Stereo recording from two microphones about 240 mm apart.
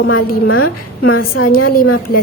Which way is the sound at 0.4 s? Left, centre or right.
Left.